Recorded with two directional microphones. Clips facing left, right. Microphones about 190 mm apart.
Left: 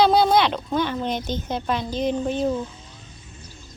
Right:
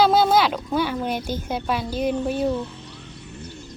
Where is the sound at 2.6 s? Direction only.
65° right (ahead or behind).